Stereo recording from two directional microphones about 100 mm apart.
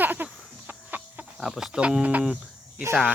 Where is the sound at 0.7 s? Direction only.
15° right (ahead or behind).